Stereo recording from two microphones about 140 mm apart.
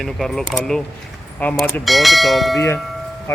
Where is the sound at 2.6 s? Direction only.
15° left (ahead or behind).